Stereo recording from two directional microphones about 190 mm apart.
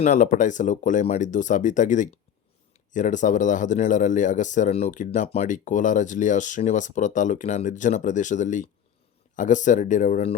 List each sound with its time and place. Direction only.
0.0 s speech: 40° left (ahead or behind)